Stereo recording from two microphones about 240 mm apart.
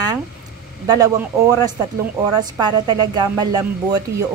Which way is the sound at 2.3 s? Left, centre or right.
Centre.